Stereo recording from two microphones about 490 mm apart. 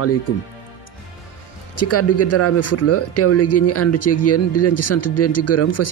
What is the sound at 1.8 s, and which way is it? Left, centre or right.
A man's voice, left.